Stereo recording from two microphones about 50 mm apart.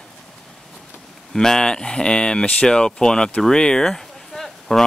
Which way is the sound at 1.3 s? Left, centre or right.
Centre.